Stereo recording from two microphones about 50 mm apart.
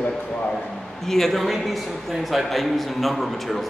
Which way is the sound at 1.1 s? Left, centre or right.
Centre.